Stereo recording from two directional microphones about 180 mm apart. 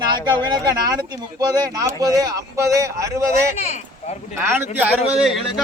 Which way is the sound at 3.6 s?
40° left (ahead or behind).